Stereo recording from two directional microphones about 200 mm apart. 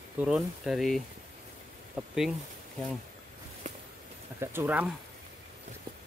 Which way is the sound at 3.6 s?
35° right (ahead or behind).